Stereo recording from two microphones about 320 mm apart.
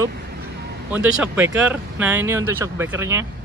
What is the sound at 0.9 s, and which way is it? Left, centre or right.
Speech, centre.